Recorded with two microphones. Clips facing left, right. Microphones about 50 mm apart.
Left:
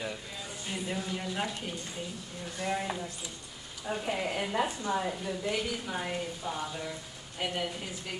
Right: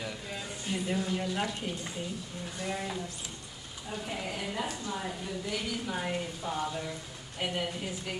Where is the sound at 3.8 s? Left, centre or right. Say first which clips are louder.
Left 5 dB; left.